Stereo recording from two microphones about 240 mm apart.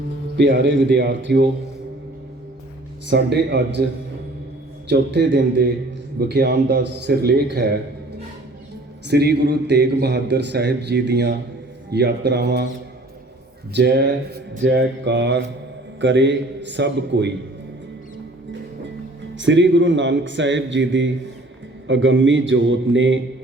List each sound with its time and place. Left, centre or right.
0.3 s a man's voice: right
3.1 s a man's voice: right
4.9 s a man's voice: right
9.0 s a man's voice: right
13.7 s a man's voice: right
19.4 s a man's voice: right